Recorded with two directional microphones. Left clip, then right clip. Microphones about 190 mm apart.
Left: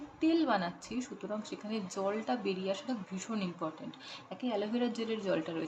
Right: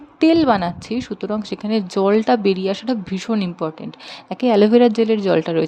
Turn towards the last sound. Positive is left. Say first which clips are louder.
# right 17 dB
turn(degrees=-50)  # may be behind; listen again after turning